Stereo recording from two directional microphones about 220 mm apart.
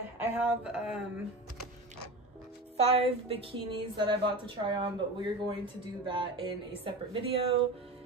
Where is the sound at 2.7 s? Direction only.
30° right (ahead or behind).